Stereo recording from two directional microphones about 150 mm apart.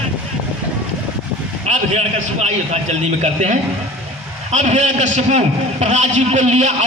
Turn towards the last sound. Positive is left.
turn(degrees=-45)  # may be behind; listen again after turning